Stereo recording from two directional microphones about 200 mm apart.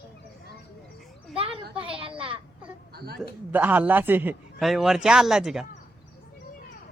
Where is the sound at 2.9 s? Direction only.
50° right (ahead or behind).